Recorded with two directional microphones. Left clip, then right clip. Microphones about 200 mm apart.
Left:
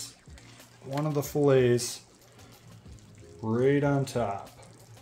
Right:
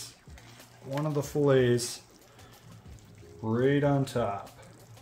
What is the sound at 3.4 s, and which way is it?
Speech, 20° left (ahead or behind).